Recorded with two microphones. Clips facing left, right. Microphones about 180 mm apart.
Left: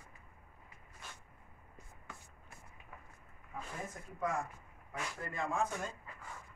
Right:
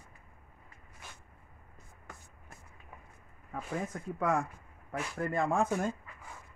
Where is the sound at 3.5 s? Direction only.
75° right (ahead or behind).